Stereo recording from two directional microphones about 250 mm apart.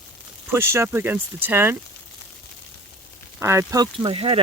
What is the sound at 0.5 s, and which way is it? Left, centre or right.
Speech, centre.